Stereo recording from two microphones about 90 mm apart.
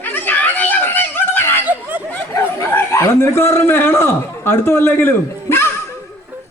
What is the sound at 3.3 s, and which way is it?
A man's voice, 25° left (ahead or behind).